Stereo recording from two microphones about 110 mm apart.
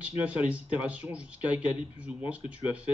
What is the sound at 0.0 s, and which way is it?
Speech, 10° right (ahead or behind).